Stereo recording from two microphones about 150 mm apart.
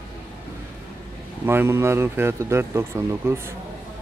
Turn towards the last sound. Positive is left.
turn(degrees=-15)  # may be behind; listen again after turning